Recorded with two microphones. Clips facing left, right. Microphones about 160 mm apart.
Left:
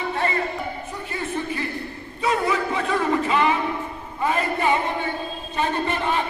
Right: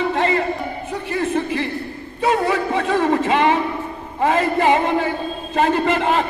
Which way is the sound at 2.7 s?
65° right (ahead or behind).